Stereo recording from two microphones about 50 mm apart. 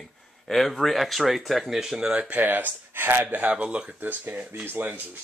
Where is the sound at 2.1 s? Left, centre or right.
Right.